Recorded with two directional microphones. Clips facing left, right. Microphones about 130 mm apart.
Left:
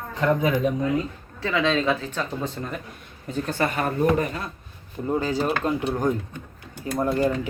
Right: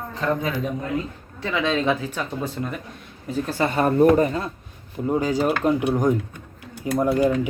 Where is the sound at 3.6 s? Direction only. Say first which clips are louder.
Right 7 dB; 35° right (ahead or behind).